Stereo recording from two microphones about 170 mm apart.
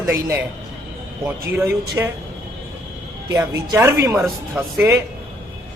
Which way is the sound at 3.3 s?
15° right (ahead or behind).